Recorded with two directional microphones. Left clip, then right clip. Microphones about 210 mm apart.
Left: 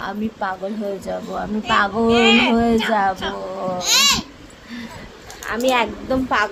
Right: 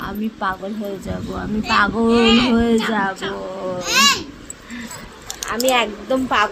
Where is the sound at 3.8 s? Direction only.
35° left (ahead or behind).